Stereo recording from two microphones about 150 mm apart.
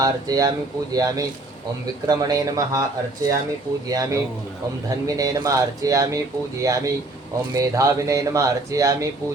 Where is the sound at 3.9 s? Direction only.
25° right (ahead or behind).